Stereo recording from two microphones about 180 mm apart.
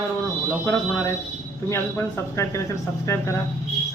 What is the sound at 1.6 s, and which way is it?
A man's voice, 15° left (ahead or behind).